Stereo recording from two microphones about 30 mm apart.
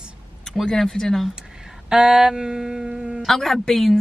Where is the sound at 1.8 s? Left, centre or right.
Right.